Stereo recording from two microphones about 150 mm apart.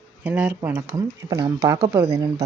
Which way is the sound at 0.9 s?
25° right (ahead or behind).